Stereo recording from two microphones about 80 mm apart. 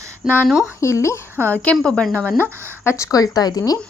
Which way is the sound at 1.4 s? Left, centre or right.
Left.